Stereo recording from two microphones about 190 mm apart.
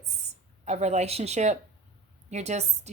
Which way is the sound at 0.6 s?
35° right (ahead or behind).